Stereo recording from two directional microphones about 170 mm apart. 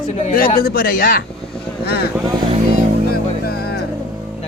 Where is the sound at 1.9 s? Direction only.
70° left (ahead or behind).